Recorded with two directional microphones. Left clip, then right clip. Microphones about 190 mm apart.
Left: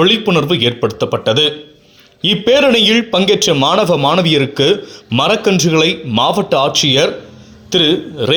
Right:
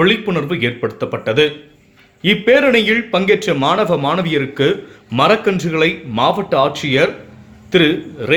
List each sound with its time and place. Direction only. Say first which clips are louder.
0.0 s a man's voice: left 3 dB; 25° left (ahead or behind)